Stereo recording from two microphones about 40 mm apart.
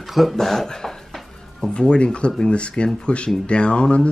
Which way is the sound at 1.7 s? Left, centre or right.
Left.